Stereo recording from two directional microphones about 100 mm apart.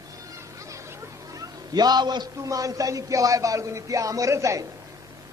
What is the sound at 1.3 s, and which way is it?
A man's voice, 40° right (ahead or behind).